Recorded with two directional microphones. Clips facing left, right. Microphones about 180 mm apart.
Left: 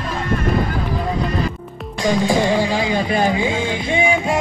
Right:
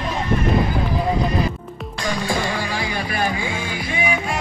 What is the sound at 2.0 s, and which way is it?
Music, 15° left (ahead or behind).